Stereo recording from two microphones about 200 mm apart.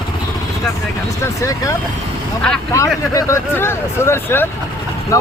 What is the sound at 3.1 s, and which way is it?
Speech, 15° left (ahead or behind).